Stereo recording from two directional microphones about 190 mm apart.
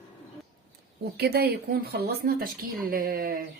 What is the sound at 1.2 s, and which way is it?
A woman's voice, 55° right (ahead or behind).